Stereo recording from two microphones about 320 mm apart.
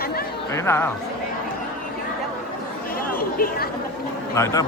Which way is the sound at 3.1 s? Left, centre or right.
Left.